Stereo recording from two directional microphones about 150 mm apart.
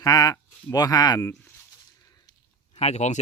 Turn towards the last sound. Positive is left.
turn(degrees=50)  # may be behind; listen again after turning